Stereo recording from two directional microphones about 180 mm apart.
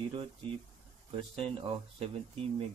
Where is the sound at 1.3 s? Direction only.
30° right (ahead or behind).